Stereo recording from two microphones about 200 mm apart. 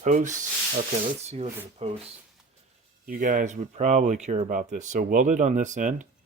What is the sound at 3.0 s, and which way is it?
Speech, 40° right (ahead or behind).